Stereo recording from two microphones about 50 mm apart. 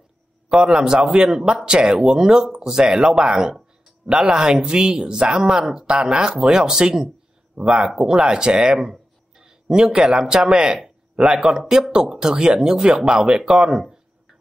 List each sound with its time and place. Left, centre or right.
0.5 s speech: centre
8.7 s a sound: centre
11.4 s speech: centre